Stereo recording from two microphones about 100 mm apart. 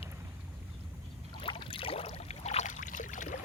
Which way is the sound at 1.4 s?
60° left (ahead or behind).